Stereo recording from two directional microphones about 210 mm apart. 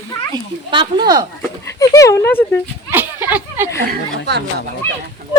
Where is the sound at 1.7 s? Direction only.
15° left (ahead or behind).